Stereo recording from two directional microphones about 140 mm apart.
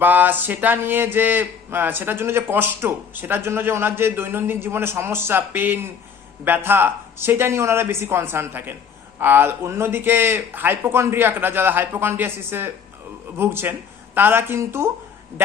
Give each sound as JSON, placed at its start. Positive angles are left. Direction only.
{"t": 0.0, "sound": "speech", "side_deg": -15}